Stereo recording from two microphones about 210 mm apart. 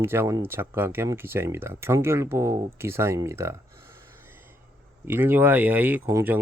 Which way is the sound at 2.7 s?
10° right (ahead or behind).